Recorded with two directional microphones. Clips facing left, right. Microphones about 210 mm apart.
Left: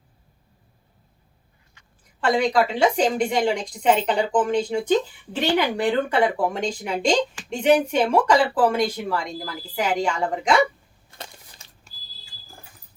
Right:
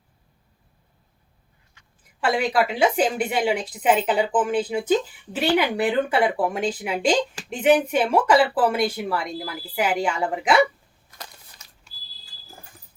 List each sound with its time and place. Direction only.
2.2 s speech: 5° right (ahead or behind)
11.1 s crushing: 30° left (ahead or behind)